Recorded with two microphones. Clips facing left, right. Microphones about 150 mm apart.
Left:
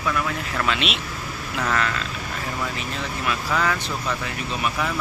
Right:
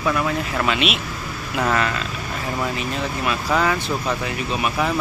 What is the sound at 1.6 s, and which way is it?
Speech, 20° right (ahead or behind).